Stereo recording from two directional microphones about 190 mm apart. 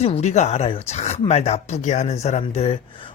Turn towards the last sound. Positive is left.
turn(degrees=30)  # may be behind; listen again after turning